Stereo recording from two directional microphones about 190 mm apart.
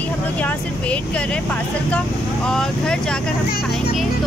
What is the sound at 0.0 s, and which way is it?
Speech, 10° left (ahead or behind).